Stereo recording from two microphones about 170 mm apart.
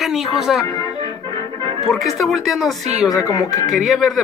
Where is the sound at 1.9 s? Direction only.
Centre (ahead or behind).